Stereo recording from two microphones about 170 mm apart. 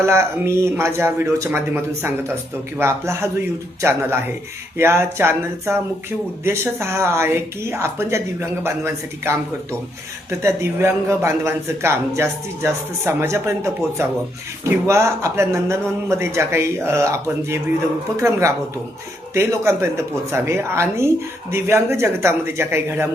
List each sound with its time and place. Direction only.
0.0 s speech: 15° right (ahead or behind)
10.4 s speech: 15° right (ahead or behind)